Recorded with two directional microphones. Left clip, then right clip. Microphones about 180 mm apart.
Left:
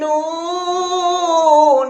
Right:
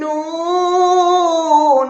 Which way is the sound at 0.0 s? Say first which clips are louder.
Left 1 dB; 20° right (ahead or behind).